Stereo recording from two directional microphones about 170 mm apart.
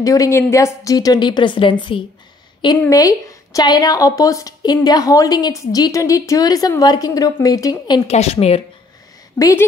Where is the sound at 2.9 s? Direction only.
20° left (ahead or behind).